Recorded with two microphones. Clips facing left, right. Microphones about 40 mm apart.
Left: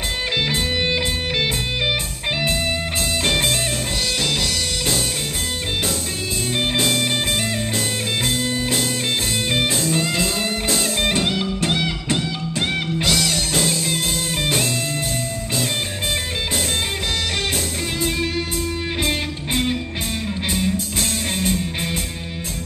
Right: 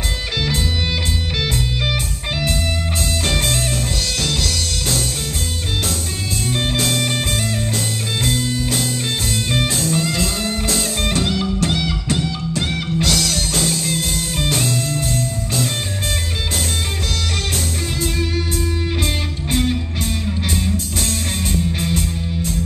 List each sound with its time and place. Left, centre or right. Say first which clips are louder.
3.3 s music: left 1 dB; centre
6.5 s music: even; centre
8.3 s music: right 1 dB; centre
11.0 s music: even; centre
19.0 s music: even; centre